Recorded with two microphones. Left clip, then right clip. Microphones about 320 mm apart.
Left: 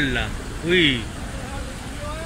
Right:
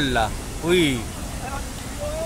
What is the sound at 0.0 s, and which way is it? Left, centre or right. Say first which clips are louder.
Speech: right 2 dB; right.